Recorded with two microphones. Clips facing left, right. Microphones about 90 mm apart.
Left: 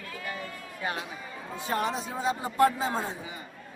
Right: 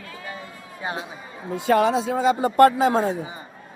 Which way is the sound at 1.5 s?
85° right.